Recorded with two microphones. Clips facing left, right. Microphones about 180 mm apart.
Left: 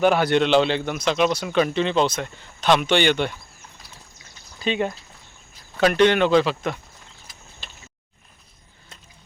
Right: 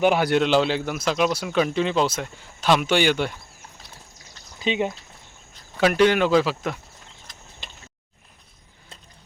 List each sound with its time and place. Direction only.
0.0 s speech: 10° right (ahead or behind)
4.6 s speech: 15° right (ahead or behind)
5.7 s speech: 5° right (ahead or behind)
7.3 s a sound: 10° left (ahead or behind)